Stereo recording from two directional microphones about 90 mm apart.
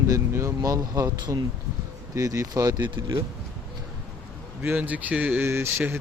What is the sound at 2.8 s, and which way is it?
Speech, 60° right (ahead or behind).